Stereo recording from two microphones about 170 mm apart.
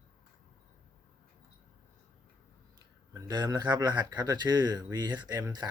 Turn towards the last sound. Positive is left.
turn(degrees=-25)  # may be behind; listen again after turning